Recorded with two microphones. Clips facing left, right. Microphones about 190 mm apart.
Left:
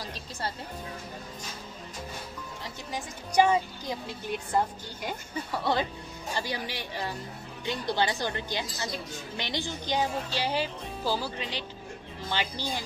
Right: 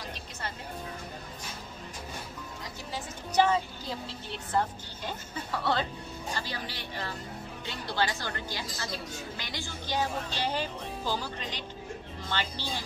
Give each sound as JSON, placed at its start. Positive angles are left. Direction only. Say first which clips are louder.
{"t": 0.0, "sound": "music", "louder": "left 3 dB", "side_deg": 35}
{"t": 2.9, "sound": "a woman's voice", "louder": "left 1 dB", "side_deg": 15}